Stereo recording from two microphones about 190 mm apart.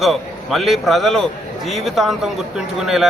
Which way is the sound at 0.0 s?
Centre (ahead or behind).